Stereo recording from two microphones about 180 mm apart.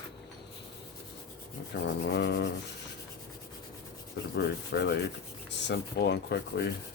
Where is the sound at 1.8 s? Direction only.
80° left.